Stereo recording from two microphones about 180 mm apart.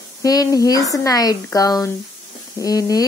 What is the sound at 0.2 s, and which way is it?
Speech, 20° left (ahead or behind).